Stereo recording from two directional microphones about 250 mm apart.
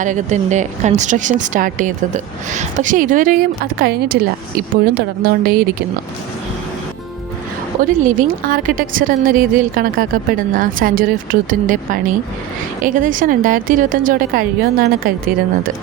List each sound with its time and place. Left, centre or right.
0.0 s a woman's voice: right
8.0 s a woman's voice: right